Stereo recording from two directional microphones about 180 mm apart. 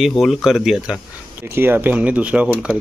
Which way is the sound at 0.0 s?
Centre (ahead or behind).